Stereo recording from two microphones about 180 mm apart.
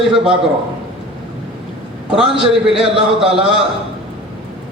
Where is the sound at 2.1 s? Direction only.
5° right (ahead or behind).